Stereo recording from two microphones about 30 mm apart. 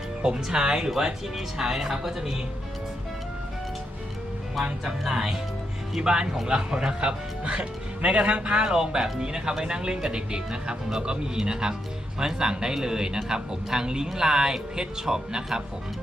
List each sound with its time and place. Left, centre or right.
0.2 s speech: right; by 2.4 s centre
4.8 s speech: centre
6.0 s speech: right
7.6 s speech: right
8.4 s speech: right